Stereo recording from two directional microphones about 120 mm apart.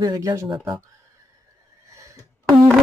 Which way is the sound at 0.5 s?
45° right (ahead or behind).